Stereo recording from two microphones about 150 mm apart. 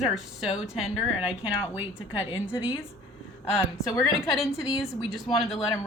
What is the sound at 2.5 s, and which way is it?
Speech, 35° left (ahead or behind).